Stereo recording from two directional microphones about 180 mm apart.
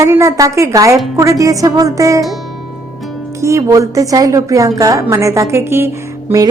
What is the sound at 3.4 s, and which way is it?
A woman's voice, 15° right (ahead or behind).